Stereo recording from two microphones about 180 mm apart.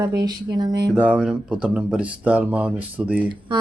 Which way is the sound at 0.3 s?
25° right (ahead or behind).